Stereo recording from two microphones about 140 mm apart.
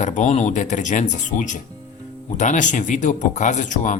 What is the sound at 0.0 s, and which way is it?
Speech, 60° left (ahead or behind).